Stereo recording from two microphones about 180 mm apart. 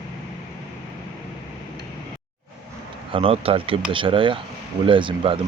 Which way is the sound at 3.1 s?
30° right (ahead or behind).